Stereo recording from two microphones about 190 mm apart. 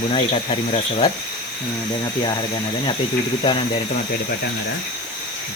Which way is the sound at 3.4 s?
25° left (ahead or behind).